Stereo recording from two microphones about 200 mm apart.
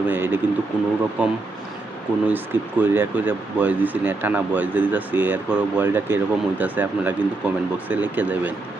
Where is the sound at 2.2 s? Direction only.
10° right (ahead or behind).